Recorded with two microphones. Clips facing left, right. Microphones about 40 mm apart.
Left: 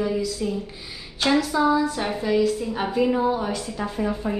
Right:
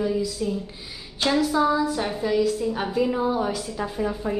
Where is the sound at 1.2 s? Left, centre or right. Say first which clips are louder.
Left 1 dB; centre.